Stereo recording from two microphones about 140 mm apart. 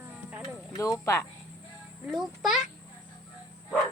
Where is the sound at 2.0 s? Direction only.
Centre (ahead or behind).